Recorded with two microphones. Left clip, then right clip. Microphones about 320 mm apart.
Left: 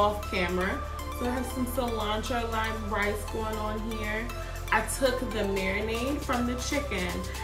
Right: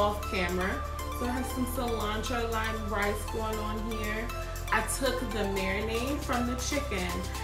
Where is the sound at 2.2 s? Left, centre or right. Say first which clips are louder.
Left 1 dB; centre.